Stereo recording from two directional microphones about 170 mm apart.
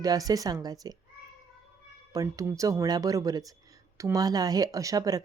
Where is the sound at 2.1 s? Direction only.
20° right (ahead or behind).